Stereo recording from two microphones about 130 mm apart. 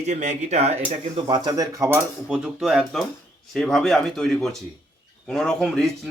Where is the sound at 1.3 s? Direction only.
35° right (ahead or behind).